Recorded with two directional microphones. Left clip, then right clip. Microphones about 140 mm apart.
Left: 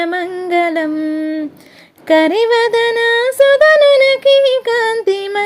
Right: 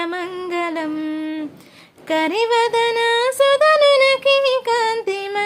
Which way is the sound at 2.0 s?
40° left (ahead or behind).